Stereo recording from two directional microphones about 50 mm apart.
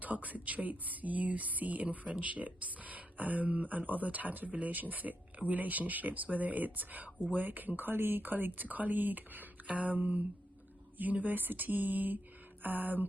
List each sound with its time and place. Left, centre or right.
0.0 s speech: right